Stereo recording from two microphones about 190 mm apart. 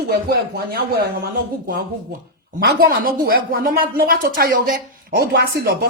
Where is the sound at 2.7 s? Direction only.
50° right (ahead or behind).